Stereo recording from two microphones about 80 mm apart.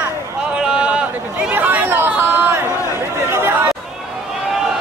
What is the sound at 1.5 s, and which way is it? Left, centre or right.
Chatter, right.